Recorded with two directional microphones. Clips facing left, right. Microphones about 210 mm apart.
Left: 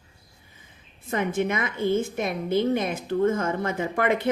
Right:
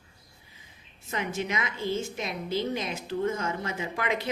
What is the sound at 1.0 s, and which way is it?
A woman's voice, 55° left (ahead or behind).